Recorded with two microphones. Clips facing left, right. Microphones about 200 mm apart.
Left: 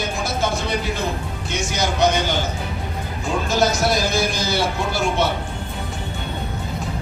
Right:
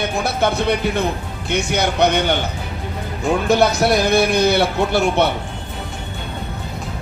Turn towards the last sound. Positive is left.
turn(degrees=-65)  # may be behind; listen again after turning